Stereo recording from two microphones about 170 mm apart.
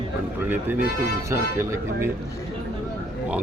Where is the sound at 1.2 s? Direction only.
15° right (ahead or behind).